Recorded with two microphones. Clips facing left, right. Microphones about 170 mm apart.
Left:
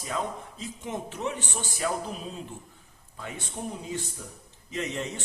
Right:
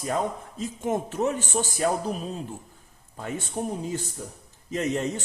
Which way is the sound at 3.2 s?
45° right (ahead or behind).